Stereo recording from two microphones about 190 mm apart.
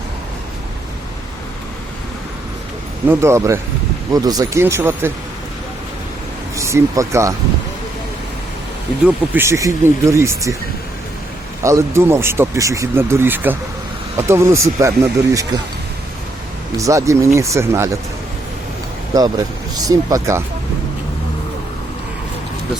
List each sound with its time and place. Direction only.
3.1 s speech: 15° right (ahead or behind)
6.6 s speech: 15° right (ahead or behind)
9.0 s speech: 10° right (ahead or behind)
11.6 s speech: 15° right (ahead or behind)
16.7 s speech: 15° right (ahead or behind)
19.1 s speech: 20° right (ahead or behind)